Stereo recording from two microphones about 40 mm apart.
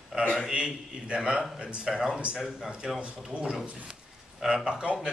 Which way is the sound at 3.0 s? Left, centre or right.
Right.